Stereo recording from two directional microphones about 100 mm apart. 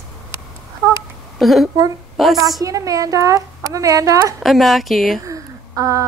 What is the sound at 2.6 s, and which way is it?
A woman's voice, 35° right (ahead or behind).